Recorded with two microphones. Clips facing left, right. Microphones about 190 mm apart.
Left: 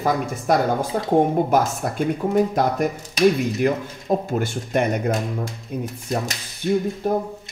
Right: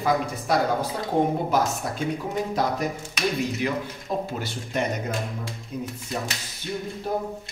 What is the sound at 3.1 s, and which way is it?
Speech, 45° left (ahead or behind).